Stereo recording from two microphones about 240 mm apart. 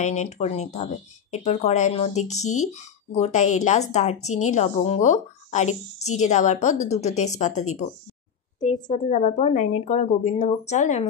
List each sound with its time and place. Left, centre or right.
0.0 s a woman's voice: left
8.8 s a woman's voice: left